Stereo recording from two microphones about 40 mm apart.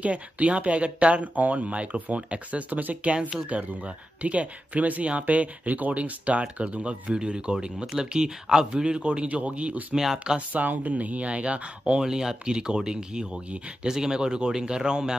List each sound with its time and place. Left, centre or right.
0.0 s a man's voice: right
2.7 s speech: right
3.2 s speech: centre
3.4 s a man's voice: right
10.1 s a man's voice: right
10.5 s speech: right
12.0 s a man's voice: centre